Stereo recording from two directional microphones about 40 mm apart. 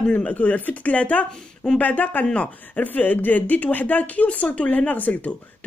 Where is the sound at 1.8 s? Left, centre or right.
Left.